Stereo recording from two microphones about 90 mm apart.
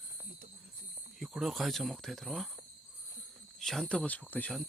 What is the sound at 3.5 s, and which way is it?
Speech, 5° left (ahead or behind).